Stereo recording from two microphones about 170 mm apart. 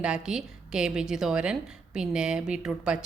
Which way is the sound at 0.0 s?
5° right (ahead or behind).